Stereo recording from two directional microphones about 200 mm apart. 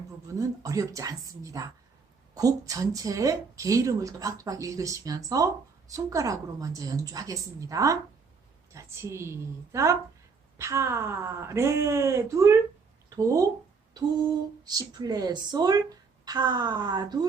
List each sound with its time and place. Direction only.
0.3 s a woman's voice: 15° right (ahead or behind)
14.6 s speech: 20° right (ahead or behind)